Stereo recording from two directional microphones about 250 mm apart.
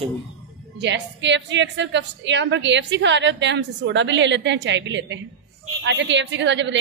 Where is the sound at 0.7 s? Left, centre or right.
Right.